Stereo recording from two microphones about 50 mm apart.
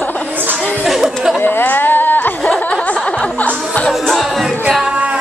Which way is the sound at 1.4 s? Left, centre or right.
Left.